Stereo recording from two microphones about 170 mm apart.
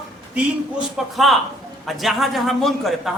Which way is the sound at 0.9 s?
Centre (ahead or behind).